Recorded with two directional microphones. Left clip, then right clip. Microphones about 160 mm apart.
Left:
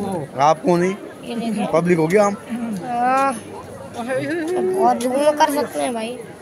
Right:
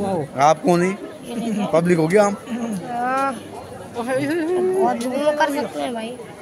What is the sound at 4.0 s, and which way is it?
Speech, 45° right (ahead or behind).